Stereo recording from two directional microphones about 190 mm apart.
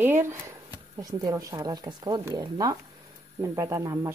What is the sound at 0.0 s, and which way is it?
A woman's voice, 15° right (ahead or behind).